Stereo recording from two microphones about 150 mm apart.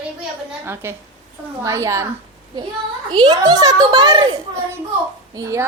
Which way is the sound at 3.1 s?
30° right (ahead or behind).